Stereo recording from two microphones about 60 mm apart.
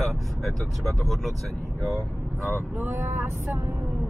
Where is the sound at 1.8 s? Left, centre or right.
Right.